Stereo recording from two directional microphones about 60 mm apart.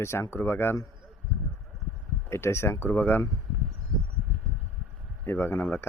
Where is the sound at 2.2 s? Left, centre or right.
Left.